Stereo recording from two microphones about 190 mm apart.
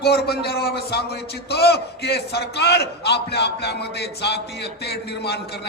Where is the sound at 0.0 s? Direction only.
55° left (ahead or behind).